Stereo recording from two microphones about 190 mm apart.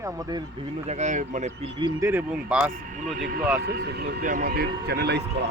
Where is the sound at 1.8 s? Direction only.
15° right (ahead or behind).